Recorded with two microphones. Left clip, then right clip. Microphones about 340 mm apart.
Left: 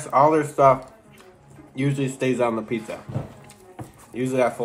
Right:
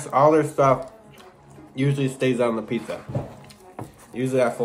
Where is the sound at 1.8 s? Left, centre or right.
Centre.